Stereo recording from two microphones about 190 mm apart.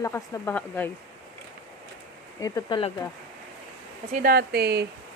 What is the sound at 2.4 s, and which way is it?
Speech, 25° left (ahead or behind).